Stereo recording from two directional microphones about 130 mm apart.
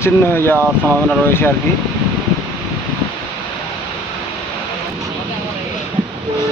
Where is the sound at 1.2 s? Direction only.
15° left (ahead or behind).